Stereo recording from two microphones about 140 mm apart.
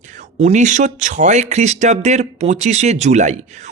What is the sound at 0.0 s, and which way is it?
Speech, 60° right (ahead or behind).